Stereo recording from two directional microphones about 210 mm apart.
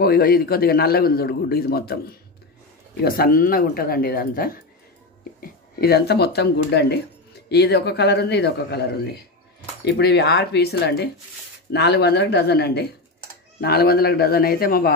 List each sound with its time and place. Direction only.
0.0 s a man's voice: 45° left (ahead or behind)